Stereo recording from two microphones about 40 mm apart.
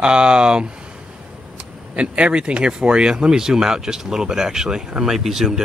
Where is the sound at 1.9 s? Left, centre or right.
Right.